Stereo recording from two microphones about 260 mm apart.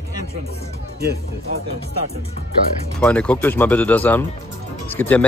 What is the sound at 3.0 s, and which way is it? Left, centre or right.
A man's voice, centre.